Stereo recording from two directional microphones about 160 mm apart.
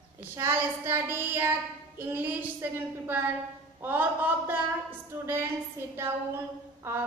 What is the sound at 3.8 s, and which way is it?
Child singing, 10° right (ahead or behind).